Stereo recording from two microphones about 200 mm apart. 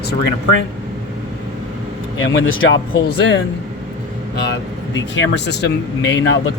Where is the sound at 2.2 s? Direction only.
75° left (ahead or behind).